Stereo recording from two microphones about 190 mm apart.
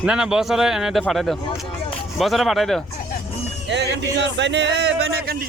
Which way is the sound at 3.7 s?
65° right (ahead or behind).